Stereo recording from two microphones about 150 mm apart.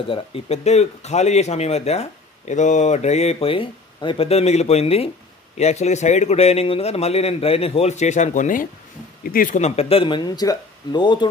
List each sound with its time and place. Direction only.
0.1 s speech: 40° left (ahead or behind); by 8.6 s 55° left (ahead or behind)
9.2 s speech: 70° left (ahead or behind)
9.6 s speech: 45° left (ahead or behind)